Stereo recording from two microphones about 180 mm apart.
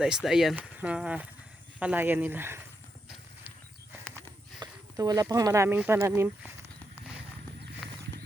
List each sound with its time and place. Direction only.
0.0 s speech: centre (ahead or behind)
4.6 s speech: 20° right (ahead or behind)
7.8 s horse: 5° left (ahead or behind)